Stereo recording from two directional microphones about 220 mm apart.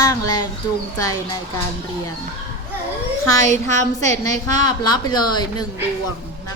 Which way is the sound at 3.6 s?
15° left (ahead or behind).